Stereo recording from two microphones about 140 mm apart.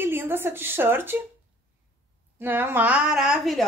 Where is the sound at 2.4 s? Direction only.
15° right (ahead or behind).